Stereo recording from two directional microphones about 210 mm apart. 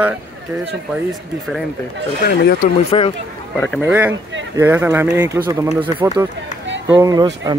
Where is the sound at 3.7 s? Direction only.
5° right (ahead or behind).